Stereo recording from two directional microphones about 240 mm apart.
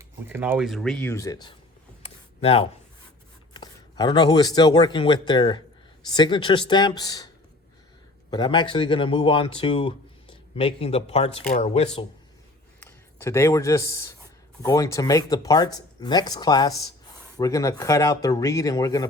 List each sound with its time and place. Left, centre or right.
0.0 s speech: centre
2.0 s a sound: left
3.5 s speech: centre
8.3 s speech: centre
12.8 s speech: centre